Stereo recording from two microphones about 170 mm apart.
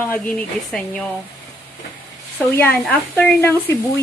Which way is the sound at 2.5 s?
10° left (ahead or behind).